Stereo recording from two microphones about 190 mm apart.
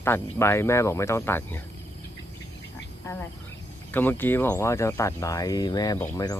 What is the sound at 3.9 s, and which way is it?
Speech, 10° left (ahead or behind).